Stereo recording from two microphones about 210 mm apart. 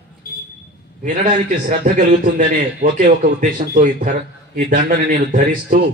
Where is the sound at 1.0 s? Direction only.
40° right (ahead or behind).